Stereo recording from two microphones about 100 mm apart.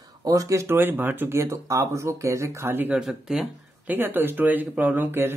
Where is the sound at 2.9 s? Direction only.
5° right (ahead or behind).